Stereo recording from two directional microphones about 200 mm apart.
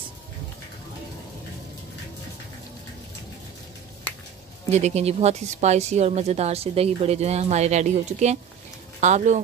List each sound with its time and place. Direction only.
4.6 s speech: 35° right (ahead or behind)